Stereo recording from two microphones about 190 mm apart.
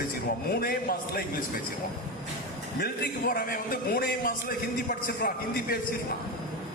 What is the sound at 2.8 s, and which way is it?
A man's voice, 50° left (ahead or behind).